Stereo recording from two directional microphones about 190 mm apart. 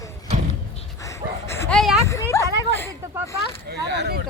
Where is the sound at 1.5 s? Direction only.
15° left (ahead or behind).